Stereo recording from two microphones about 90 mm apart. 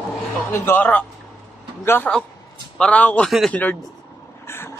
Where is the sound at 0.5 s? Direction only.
25° left (ahead or behind).